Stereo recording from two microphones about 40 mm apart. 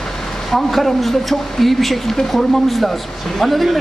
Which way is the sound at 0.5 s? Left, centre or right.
Centre.